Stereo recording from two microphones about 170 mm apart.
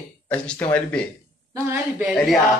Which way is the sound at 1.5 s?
15° right (ahead or behind).